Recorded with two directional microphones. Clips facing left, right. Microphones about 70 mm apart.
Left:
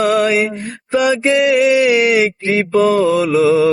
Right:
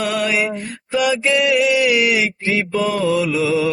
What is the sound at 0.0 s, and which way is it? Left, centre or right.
Mantra, left.